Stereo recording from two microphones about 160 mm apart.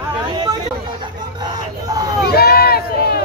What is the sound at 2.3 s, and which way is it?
Speech, 75° left (ahead or behind).